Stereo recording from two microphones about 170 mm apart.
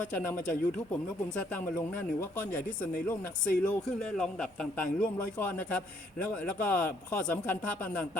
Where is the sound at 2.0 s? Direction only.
10° left (ahead or behind).